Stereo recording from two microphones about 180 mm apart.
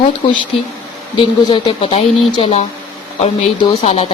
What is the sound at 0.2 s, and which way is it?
Speech, 25° left (ahead or behind).